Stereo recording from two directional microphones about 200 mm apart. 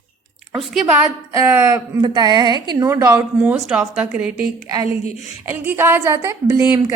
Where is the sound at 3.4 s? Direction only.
5° right (ahead or behind).